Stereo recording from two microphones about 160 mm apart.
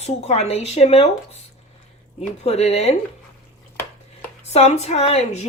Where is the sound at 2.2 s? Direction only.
40° left (ahead or behind).